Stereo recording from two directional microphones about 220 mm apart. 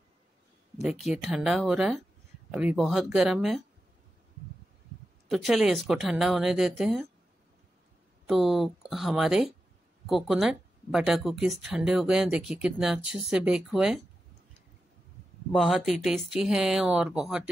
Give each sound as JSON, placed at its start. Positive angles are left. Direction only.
{"t": 0.8, "sound": "speech", "side_deg": 0}
{"t": 5.3, "sound": "speech", "side_deg": 0}
{"t": 8.3, "sound": "speech", "side_deg": 0}
{"t": 15.5, "sound": "speech", "side_deg": 0}